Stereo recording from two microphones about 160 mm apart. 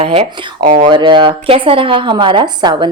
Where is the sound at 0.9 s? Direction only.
30° right (ahead or behind).